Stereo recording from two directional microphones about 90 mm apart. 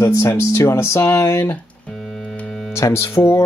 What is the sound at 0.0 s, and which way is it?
Speech, 35° left (ahead or behind).